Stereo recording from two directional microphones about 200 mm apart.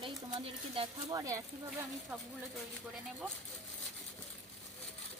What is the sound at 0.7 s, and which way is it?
Speech, 25° right (ahead or behind).